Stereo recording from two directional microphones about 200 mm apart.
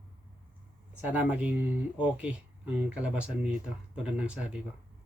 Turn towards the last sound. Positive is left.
turn(degrees=-5)  # may be behind; listen again after turning